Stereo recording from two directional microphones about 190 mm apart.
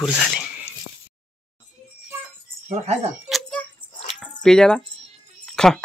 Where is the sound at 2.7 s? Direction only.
35° right (ahead or behind).